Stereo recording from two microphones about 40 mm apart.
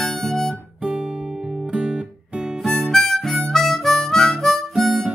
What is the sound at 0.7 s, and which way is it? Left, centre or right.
Guitar, right.